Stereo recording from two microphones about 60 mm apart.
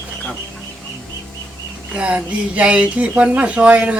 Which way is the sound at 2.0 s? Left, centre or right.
Right.